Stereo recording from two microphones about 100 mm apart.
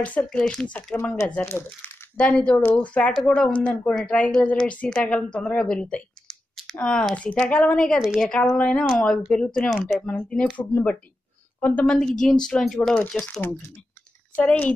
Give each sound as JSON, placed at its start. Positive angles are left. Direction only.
{"t": 0.0, "sound": "a woman's voice", "side_deg": 15}
{"t": 1.4, "sound": "speech", "side_deg": 25}
{"t": 2.1, "sound": "a woman's voice", "side_deg": 10}
{"t": 14.3, "sound": "a woman's voice", "side_deg": 15}